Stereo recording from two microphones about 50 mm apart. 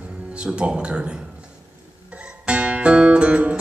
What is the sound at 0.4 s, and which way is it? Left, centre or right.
Speech, centre.